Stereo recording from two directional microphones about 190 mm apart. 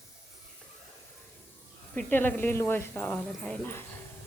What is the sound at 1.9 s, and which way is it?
Speech, 10° left (ahead or behind).